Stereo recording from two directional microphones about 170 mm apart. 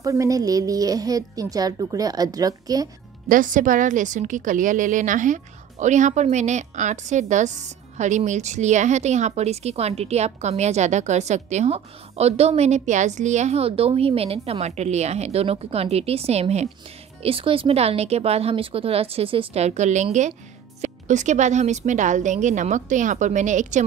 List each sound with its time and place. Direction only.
0.0 s a woman's voice: 20° right (ahead or behind)
3.3 s a woman's voice: 50° right (ahead or behind)